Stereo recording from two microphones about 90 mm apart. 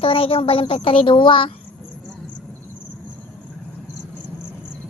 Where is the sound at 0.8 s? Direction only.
70° left (ahead or behind).